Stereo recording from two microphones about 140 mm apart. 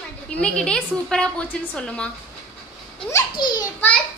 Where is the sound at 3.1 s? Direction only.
30° left (ahead or behind).